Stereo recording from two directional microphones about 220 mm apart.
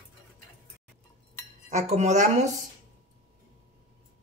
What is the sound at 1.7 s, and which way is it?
Speech, 30° right (ahead or behind).